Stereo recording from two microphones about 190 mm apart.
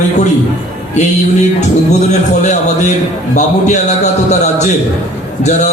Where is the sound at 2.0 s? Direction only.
40° left (ahead or behind).